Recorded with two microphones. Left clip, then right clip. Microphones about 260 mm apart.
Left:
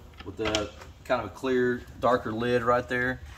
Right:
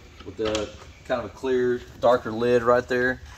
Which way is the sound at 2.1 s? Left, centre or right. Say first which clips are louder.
Right 5 dB; centre.